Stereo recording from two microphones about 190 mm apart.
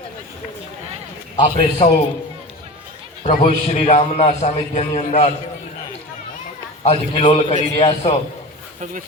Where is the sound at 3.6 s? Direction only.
35° left (ahead or behind).